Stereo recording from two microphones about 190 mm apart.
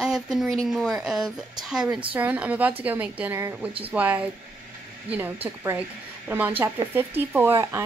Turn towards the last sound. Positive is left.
turn(degrees=-10)  # may be behind; listen again after turning